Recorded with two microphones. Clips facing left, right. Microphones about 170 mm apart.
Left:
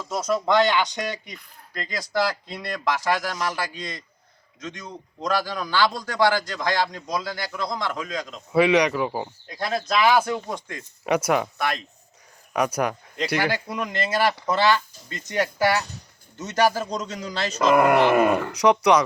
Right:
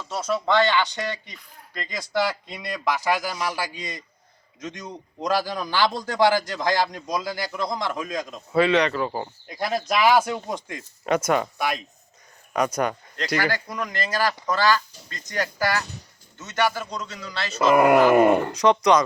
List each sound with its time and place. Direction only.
0.0 s a man's voice: 10° left (ahead or behind); by 8.4 s 15° right (ahead or behind)
8.5 s speech: 10° left (ahead or behind)
9.5 s a man's voice: 15° right (ahead or behind)
11.0 s speech: 5° left (ahead or behind)
11.5 s a man's voice: 10° right (ahead or behind)
12.5 s speech: 5° left (ahead or behind)
13.9 s speech: 25° left (ahead or behind)
16.4 s a man's voice: 35° left (ahead or behind)
17.6 s a man's voice: 5° right (ahead or behind)
18.1 s speech: 25° right (ahead or behind)
18.5 s speech: 10° left (ahead or behind)